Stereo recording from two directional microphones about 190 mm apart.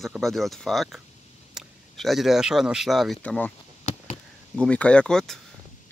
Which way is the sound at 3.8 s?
40° left (ahead or behind).